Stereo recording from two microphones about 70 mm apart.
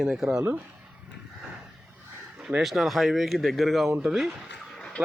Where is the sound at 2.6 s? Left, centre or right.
Centre.